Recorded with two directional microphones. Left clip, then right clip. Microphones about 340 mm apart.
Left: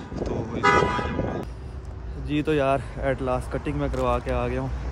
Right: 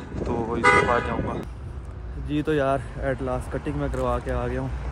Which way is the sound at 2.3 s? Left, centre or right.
Centre.